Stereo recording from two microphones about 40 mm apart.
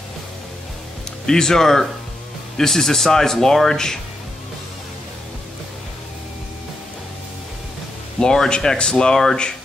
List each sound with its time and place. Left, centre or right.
1.2 s speech: centre
8.2 s speech: centre